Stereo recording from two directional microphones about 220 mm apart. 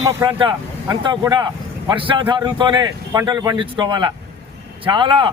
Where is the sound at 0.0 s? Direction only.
20° right (ahead or behind).